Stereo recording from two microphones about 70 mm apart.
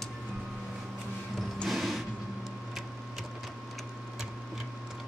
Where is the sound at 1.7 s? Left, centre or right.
Centre.